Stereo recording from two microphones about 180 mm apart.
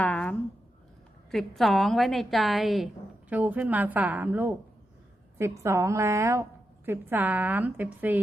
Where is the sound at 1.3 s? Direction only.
Centre (ahead or behind).